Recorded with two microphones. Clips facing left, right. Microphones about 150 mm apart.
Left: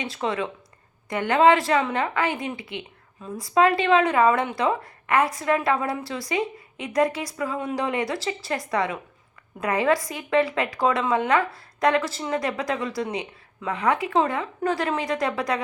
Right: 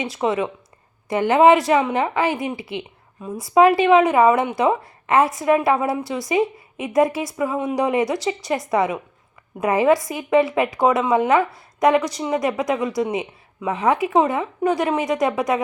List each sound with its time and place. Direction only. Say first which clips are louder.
0.0 s a woman's voice: right 5 dB; 20° right (ahead or behind)
2.7 s a sound: right 5 dB; 15° right (ahead or behind)
3.5 s a woman's voice: right 5 dB; 20° right (ahead or behind)